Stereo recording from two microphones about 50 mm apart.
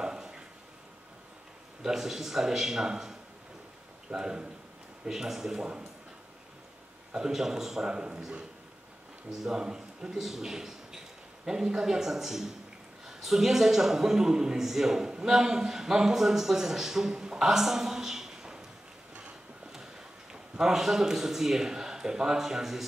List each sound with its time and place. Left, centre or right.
0.0 s a sound: centre
1.8 s a man's voice: centre
7.1 s a man's voice: centre
7.9 s speech: centre
9.3 s a man's voice: centre
20.5 s a man's voice: centre